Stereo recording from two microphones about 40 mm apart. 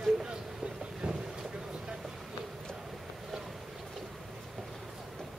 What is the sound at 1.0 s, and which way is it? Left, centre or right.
Boat, right.